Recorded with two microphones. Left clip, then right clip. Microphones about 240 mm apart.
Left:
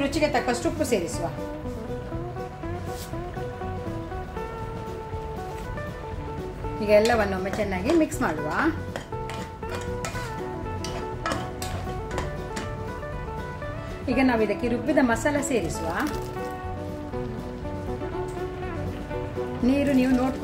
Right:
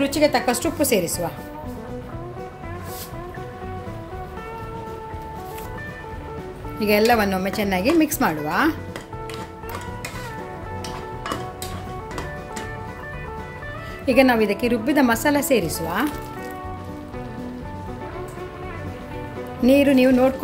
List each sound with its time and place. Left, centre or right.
0.0 s speech: right
6.8 s speech: right
14.0 s a woman's voice: right
19.6 s speech: right